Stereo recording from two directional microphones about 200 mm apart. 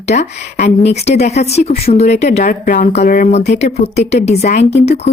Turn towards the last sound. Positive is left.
turn(degrees=30)  # may be behind; listen again after turning